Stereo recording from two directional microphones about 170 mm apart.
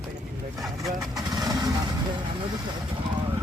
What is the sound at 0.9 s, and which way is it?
Speech, 25° right (ahead or behind).